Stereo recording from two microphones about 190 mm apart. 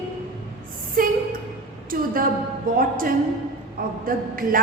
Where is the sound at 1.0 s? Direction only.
50° right (ahead or behind).